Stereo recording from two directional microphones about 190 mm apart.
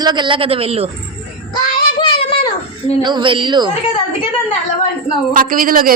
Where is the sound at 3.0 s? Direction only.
25° right (ahead or behind).